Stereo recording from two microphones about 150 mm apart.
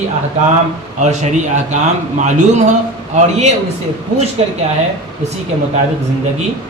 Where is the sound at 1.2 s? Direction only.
55° right (ahead or behind).